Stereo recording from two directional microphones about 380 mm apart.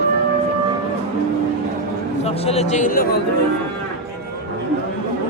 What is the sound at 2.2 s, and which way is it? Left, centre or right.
A man's voice, centre.